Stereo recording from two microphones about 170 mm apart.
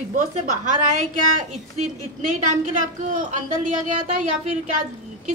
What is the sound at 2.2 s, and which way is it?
A woman's voice, 50° right (ahead or behind).